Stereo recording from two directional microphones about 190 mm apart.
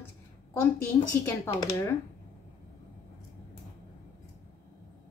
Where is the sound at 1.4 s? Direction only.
15° left (ahead or behind).